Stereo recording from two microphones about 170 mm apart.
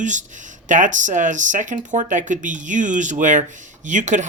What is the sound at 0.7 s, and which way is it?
Speech, 50° right (ahead or behind).